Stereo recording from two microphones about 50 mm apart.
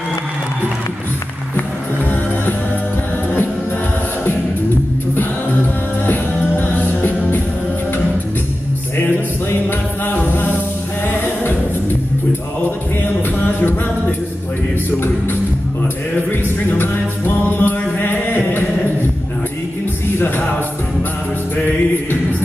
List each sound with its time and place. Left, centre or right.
6.0 s music: left
9.5 s music: left
16.2 s music: left
17.5 s mantra: left
20.2 s music: left